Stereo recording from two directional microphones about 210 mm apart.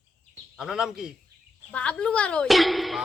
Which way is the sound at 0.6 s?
5° right (ahead or behind).